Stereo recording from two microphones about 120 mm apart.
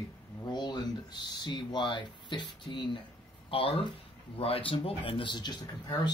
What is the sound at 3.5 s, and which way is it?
Speech, 50° left (ahead or behind).